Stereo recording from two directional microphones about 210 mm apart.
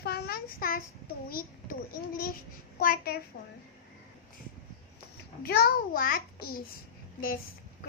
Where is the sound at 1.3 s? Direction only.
45° left (ahead or behind).